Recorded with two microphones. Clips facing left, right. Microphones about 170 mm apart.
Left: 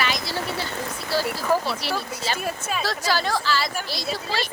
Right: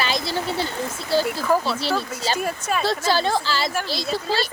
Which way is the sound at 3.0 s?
25° right (ahead or behind).